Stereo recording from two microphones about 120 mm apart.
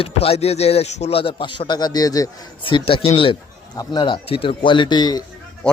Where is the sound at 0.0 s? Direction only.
55° left (ahead or behind).